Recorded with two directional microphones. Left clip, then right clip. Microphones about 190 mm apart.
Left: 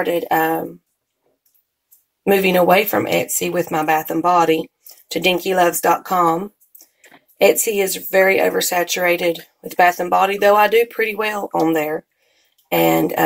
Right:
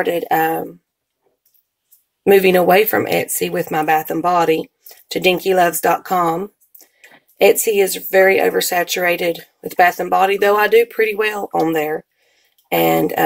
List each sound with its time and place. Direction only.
0.0 s speech: 40° right (ahead or behind)
2.2 s speech: 40° right (ahead or behind)